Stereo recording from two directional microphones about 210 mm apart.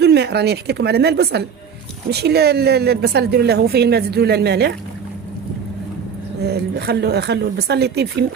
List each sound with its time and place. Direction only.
0.0 s a woman's voice: 50° right (ahead or behind)
6.4 s a woman's voice: 50° right (ahead or behind)